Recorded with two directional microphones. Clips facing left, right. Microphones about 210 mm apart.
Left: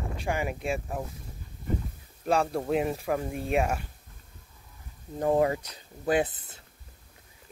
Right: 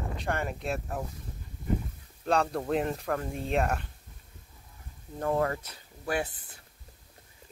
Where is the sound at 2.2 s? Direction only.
5° left (ahead or behind).